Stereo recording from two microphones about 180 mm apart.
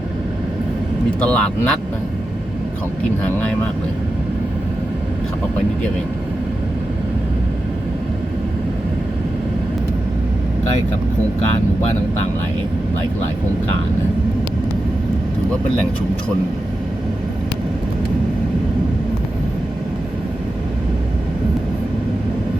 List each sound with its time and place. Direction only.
1.2 s speech: 5° left (ahead or behind)